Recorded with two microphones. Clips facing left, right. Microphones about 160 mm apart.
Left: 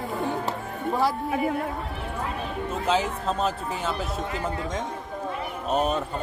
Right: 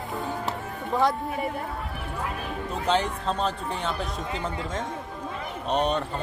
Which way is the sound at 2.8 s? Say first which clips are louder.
Even; 5° left (ahead or behind).